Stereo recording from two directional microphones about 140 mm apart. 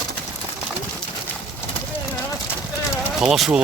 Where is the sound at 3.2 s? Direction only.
5° right (ahead or behind).